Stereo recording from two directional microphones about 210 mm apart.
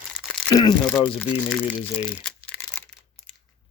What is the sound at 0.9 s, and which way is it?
Speech, 5° left (ahead or behind).